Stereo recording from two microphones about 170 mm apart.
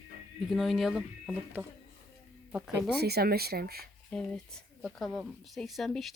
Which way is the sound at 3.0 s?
70° right (ahead or behind).